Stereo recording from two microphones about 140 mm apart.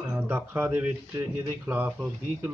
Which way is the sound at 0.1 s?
15° right (ahead or behind).